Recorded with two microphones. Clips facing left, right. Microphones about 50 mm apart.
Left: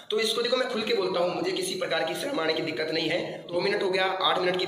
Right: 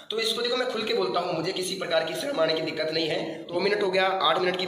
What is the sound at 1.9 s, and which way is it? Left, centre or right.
A man's voice, centre.